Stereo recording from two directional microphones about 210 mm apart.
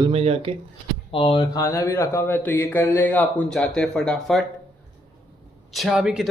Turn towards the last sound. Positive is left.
turn(degrees=-5)  # may be behind; listen again after turning